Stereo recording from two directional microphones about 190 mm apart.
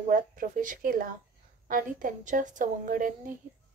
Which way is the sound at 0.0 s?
45° right (ahead or behind).